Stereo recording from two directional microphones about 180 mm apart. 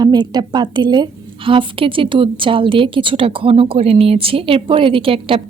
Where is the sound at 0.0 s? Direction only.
20° right (ahead or behind).